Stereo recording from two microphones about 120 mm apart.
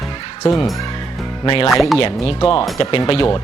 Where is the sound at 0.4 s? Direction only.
50° left (ahead or behind).